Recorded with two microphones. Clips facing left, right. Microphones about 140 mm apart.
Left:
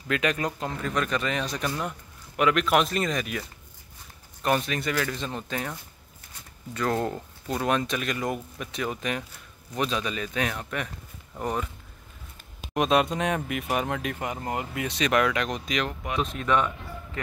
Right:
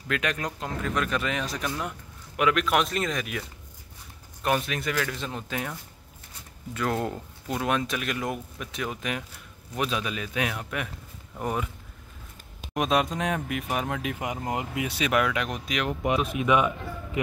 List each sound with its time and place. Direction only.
0.1 s speech: centre (ahead or behind)
12.7 s speech: centre (ahead or behind)
14.1 s speech: 15° right (ahead or behind)
15.9 s speech: 20° right (ahead or behind)
16.2 s speech: 10° right (ahead or behind)